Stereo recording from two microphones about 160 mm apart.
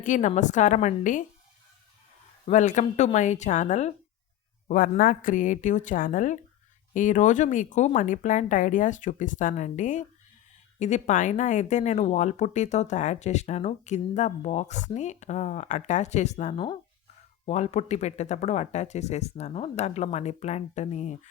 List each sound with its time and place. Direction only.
0.0 s speech: 50° left (ahead or behind)
2.5 s speech: 50° left (ahead or behind)
4.7 s speech: 65° left (ahead or behind); by 21.2 s 45° left (ahead or behind)